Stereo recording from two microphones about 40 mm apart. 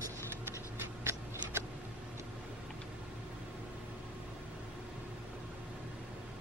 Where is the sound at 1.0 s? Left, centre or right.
Right.